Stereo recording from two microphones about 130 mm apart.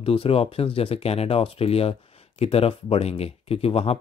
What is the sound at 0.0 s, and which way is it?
Speech, 45° left (ahead or behind).